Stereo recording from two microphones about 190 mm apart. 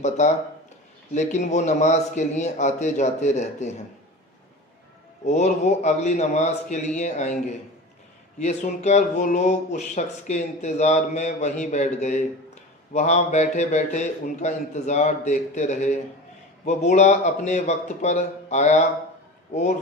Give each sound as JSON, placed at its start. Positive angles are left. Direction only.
{"t": 0.0, "sound": "speech", "side_deg": 40}
{"t": 5.2, "sound": "speech", "side_deg": 35}